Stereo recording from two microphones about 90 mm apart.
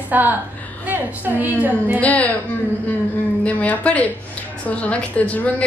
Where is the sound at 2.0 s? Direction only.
15° left (ahead or behind).